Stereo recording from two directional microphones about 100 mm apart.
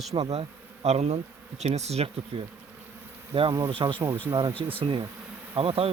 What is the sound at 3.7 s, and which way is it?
Speech, 60° right (ahead or behind).